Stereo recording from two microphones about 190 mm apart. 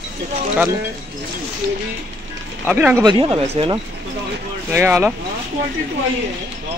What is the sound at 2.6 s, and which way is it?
Speech, 5° right (ahead or behind).